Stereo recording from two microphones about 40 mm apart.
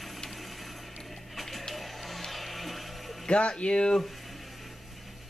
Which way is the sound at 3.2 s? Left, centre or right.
Left.